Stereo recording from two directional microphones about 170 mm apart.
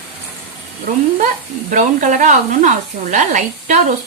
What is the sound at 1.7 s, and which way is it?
Speech, 50° right (ahead or behind).